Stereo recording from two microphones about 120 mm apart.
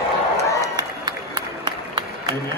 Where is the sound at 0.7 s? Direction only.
35° right (ahead or behind).